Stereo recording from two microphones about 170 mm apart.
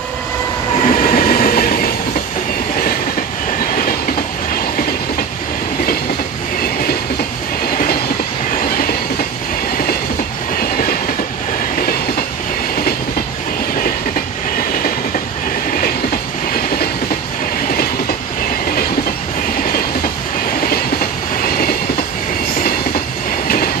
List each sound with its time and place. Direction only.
0.9 s train: 60° left (ahead or behind)
8.6 s train: 60° left (ahead or behind)
10.6 s train: 60° left (ahead or behind)
21.6 s train: 60° left (ahead or behind)